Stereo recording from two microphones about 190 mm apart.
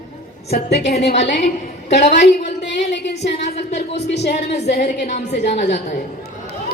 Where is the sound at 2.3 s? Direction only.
60° left (ahead or behind).